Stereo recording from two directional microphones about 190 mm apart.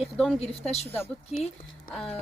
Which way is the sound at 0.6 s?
35° left (ahead or behind).